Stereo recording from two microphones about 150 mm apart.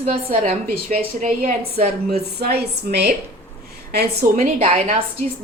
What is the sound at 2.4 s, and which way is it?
A woman's voice, 90° right.